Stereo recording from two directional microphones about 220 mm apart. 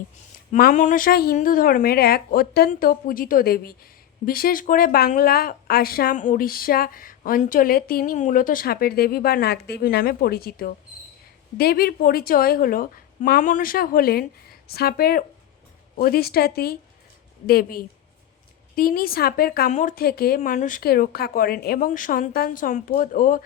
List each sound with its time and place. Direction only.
0.5 s a woman's voice: 35° left (ahead or behind)